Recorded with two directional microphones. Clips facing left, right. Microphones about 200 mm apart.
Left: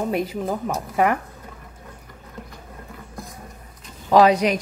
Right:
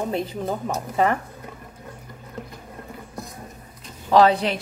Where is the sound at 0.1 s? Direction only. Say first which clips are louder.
Left 2 dB; 10° left (ahead or behind).